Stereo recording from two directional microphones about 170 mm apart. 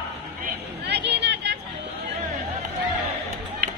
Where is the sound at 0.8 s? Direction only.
85° right.